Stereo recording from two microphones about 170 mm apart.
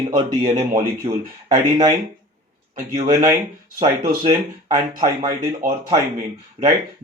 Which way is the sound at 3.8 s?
30° right (ahead or behind).